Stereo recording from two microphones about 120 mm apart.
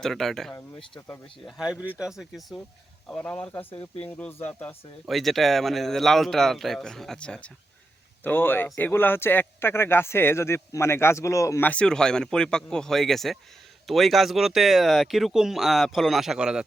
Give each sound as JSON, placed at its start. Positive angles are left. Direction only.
{"t": 0.0, "sound": "speech", "side_deg": 5}
{"t": 0.9, "sound": "speech", "side_deg": 20}
{"t": 1.5, "sound": "speech", "side_deg": -5}
{"t": 5.0, "sound": "speech", "side_deg": 0}
{"t": 11.7, "sound": "speech", "side_deg": 5}